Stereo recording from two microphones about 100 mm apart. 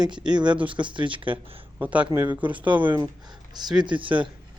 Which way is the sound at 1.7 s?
15° right (ahead or behind).